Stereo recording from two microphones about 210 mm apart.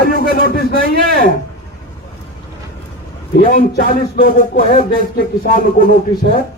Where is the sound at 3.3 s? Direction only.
45° left (ahead or behind).